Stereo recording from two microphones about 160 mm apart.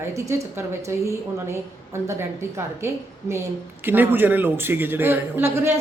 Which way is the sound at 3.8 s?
10° right (ahead or behind).